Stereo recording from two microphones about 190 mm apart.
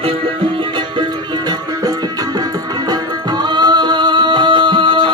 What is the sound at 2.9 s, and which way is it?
Music, 20° right (ahead or behind).